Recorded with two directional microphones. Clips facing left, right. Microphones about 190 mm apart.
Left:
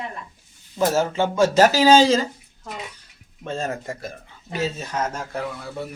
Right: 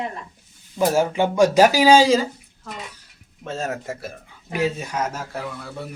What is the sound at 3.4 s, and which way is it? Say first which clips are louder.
Speech: even; 5° right (ahead or behind).